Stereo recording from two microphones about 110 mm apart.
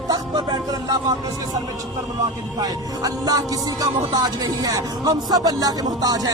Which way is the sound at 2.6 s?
35° right (ahead or behind).